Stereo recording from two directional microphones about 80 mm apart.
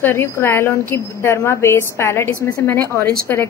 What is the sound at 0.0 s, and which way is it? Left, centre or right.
A woman's voice, left.